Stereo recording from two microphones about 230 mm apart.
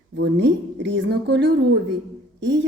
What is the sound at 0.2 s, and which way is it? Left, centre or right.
A woman's voice, right.